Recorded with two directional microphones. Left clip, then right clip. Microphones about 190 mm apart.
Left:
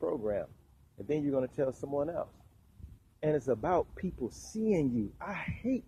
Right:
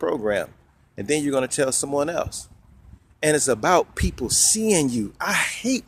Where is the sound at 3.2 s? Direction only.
25° right (ahead or behind).